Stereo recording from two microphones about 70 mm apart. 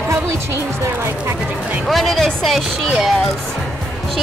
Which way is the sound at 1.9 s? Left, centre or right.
Centre.